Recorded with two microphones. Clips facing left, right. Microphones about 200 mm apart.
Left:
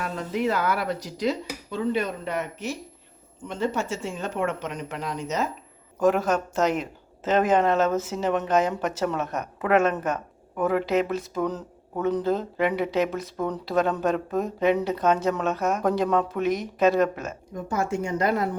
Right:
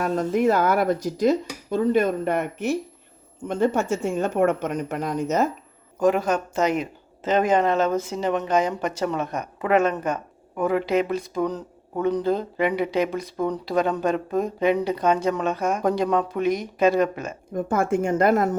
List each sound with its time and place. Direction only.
0.0 s speech: 45° right (ahead or behind)
6.0 s speech: centre (ahead or behind)
17.5 s speech: 55° right (ahead or behind)